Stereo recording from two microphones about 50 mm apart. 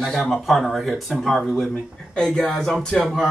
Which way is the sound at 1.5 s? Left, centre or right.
Centre.